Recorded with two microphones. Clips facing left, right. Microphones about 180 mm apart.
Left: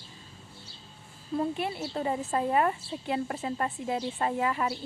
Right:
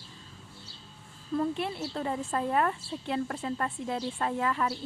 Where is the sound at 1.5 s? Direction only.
5° left (ahead or behind).